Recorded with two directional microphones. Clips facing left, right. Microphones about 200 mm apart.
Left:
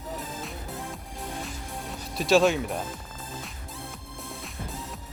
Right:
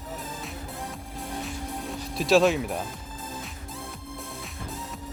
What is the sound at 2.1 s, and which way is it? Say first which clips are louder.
Speech: right 1 dB; centre (ahead or behind).